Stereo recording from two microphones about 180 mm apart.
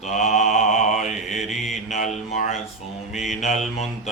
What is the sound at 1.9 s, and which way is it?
Mantra, 40° left (ahead or behind).